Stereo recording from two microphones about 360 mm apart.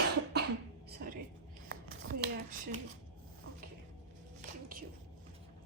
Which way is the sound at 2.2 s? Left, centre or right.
Right.